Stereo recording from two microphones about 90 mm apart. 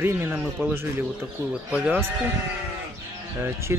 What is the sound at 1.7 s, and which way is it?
Speech, 15° right (ahead or behind).